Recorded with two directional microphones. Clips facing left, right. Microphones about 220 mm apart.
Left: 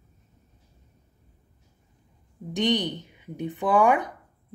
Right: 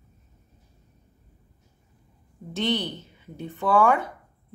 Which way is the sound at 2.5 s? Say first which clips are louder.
Left 2 dB; 15° left (ahead or behind).